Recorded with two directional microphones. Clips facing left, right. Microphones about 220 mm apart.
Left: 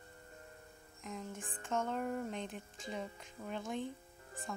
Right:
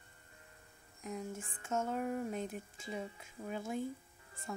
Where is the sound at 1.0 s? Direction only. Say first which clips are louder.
Right 3 dB; 10° right (ahead or behind).